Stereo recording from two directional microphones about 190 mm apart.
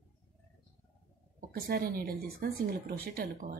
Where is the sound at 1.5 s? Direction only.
50° right (ahead or behind).